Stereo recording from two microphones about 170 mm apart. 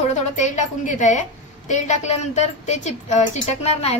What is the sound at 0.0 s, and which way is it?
A woman's voice, 45° left (ahead or behind).